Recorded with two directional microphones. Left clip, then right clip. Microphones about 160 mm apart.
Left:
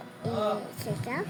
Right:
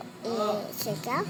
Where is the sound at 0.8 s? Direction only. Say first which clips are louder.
Right 4 dB; 25° left (ahead or behind).